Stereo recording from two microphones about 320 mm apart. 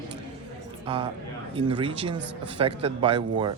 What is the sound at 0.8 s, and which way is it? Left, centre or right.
A man's voice, centre.